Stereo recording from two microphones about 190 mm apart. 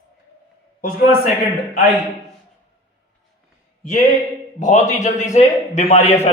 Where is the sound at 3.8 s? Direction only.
45° left (ahead or behind).